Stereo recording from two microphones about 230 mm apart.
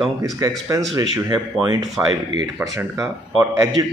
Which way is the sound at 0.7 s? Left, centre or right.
Centre.